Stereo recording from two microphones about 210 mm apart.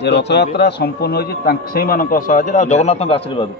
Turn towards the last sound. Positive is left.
turn(degrees=25)  # may be behind; listen again after turning